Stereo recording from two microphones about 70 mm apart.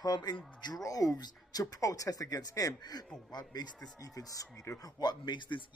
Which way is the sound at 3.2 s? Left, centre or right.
Left.